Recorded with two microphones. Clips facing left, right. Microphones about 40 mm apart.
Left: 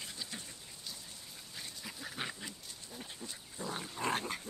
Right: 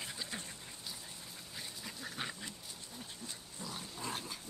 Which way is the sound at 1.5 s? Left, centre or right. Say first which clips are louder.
Left 1 dB; centre.